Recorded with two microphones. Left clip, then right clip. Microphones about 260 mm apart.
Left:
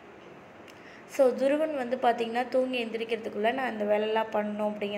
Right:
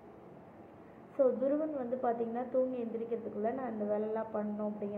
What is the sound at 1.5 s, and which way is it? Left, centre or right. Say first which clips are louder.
A woman's voice: left 7 dB; left.